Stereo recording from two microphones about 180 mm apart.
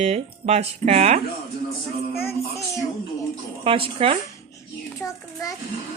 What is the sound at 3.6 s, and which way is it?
Speech, 30° right (ahead or behind).